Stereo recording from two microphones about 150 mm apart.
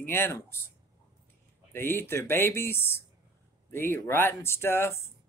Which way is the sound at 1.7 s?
15° left (ahead or behind).